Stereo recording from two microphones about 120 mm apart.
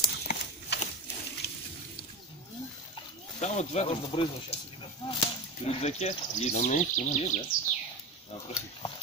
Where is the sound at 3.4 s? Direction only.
65° left (ahead or behind).